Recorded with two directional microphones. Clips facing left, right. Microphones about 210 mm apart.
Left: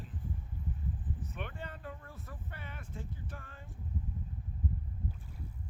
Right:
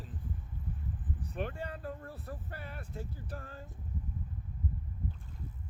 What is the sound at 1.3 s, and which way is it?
Speech, 35° right (ahead or behind).